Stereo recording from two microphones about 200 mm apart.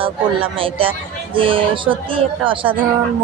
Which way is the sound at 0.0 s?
25° right (ahead or behind).